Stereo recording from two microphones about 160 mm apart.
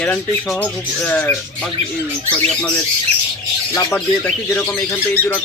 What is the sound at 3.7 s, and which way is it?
Speech, 15° left (ahead or behind).